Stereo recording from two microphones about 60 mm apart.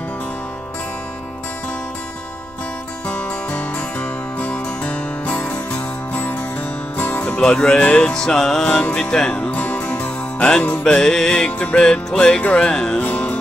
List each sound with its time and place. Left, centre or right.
3.1 s music: left
7.3 s music: centre
10.8 s music: centre